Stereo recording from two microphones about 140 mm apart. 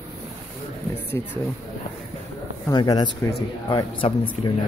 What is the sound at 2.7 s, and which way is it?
Speech, 30° left (ahead or behind).